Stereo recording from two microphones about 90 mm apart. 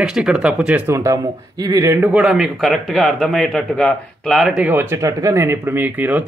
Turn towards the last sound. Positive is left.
turn(degrees=-20)  # may be behind; listen again after turning